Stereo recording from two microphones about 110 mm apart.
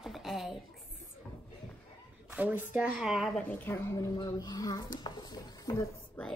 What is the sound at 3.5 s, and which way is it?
Speech, 20° left (ahead or behind).